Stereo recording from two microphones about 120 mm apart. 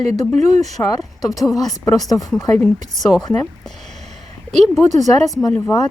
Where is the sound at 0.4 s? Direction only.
70° right (ahead or behind).